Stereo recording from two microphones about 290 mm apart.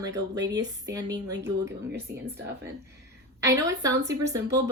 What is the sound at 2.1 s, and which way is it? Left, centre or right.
Speech, right.